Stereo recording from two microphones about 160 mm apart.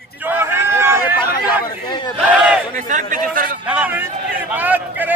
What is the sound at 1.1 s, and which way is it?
Chatter, 75° left (ahead or behind).